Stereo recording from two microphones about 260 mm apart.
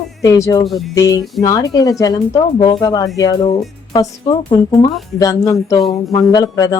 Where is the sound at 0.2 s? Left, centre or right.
Centre.